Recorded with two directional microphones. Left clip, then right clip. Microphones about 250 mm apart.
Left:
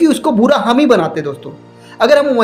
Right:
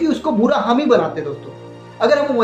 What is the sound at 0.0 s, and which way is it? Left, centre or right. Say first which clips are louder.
A woman's voice: left 5 dB; left.